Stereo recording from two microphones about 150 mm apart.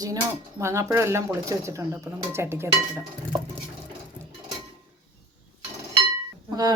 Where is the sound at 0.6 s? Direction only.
20° right (ahead or behind).